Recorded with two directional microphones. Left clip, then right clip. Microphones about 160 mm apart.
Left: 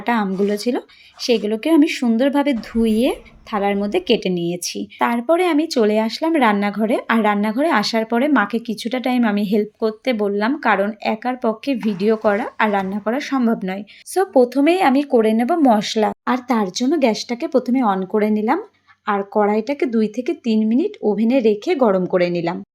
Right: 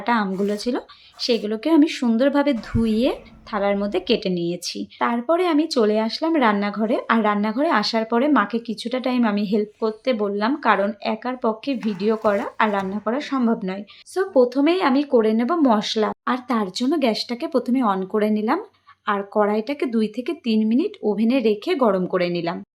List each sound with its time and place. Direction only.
0.0 s speech: 10° left (ahead or behind)
4.9 s speech: 20° left (ahead or behind)